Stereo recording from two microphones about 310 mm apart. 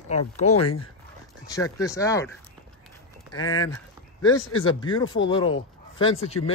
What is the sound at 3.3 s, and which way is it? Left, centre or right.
Speech, left.